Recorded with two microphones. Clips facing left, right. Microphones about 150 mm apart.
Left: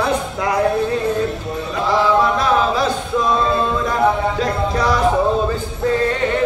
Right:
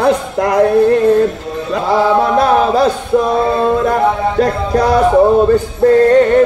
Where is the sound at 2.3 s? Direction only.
50° right (ahead or behind).